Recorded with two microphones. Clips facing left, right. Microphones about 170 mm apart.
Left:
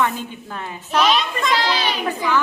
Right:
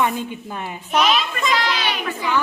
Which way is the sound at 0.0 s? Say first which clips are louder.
Right 1 dB; 15° right (ahead or behind).